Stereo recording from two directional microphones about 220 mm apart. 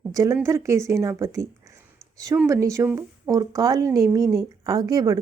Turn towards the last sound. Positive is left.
turn(degrees=-15)  # may be behind; listen again after turning